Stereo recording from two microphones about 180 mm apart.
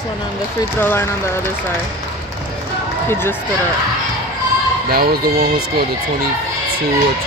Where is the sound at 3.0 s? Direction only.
15° left (ahead or behind).